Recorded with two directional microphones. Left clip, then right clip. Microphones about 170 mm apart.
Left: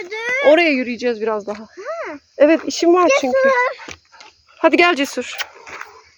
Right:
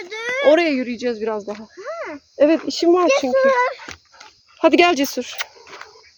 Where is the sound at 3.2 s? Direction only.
25° left (ahead or behind).